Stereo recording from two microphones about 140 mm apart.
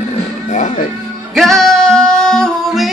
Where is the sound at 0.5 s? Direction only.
60° left (ahead or behind).